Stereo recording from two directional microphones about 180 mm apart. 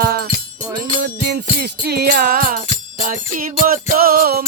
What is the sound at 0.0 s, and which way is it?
Music, 55° right (ahead or behind).